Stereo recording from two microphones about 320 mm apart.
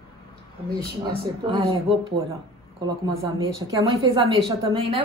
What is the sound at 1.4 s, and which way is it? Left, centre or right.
Speech, centre.